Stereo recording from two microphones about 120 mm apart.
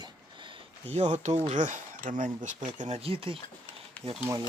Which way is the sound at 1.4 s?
80° right.